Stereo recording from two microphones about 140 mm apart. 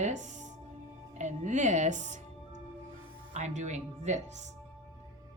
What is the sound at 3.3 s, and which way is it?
Speech, 55° right (ahead or behind).